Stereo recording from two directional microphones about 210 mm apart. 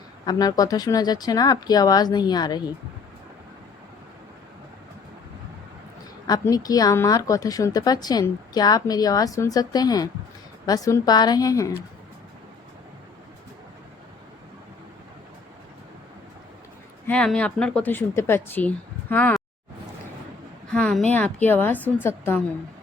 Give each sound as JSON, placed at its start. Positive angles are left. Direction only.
{"t": 0.3, "sound": "speech", "side_deg": 20}
{"t": 6.2, "sound": "speech", "side_deg": 15}
{"t": 17.1, "sound": "speech", "side_deg": 5}
{"t": 20.7, "sound": "a sound", "side_deg": 5}
{"t": 21.1, "sound": "speech", "side_deg": 5}